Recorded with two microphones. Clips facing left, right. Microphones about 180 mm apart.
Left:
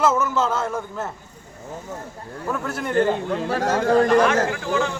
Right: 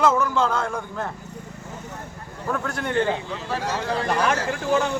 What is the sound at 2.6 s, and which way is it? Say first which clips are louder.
Speech: left 1 dB; 5° left (ahead or behind).